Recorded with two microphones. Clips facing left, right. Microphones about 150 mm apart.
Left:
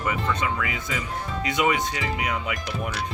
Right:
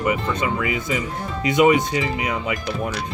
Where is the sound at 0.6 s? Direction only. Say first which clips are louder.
Right 6 dB; 10° right (ahead or behind).